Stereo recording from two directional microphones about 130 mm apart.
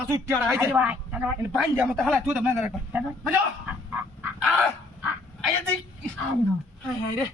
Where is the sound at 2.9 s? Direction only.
10° right (ahead or behind).